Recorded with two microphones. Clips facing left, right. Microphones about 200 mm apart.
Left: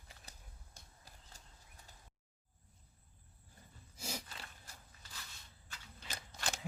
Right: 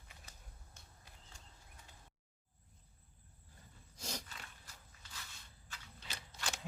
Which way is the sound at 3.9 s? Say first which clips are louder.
Left 1 dB; 5° left (ahead or behind).